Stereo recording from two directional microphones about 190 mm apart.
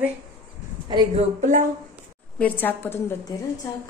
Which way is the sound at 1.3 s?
40° right (ahead or behind).